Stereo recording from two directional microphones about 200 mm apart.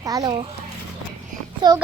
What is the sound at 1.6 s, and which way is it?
Speech, 20° right (ahead or behind).